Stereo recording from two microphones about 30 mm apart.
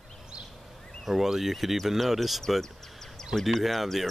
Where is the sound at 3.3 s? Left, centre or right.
Centre.